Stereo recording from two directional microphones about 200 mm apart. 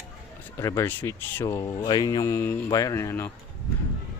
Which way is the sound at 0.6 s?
15° left (ahead or behind).